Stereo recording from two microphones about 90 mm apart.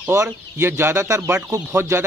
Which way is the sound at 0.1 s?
30° right (ahead or behind).